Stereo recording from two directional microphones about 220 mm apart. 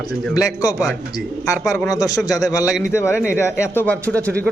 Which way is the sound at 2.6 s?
Centre (ahead or behind).